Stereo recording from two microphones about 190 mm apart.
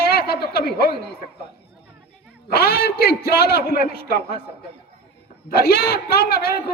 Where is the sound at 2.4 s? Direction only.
55° left (ahead or behind).